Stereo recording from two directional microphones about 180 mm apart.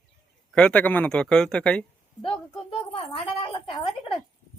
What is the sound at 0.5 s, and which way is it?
Speech, 5° left (ahead or behind).